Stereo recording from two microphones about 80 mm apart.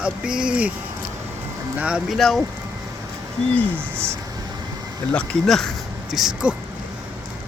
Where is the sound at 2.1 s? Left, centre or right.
Centre.